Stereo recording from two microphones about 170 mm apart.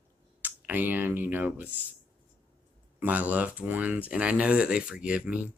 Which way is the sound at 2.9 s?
10° right (ahead or behind).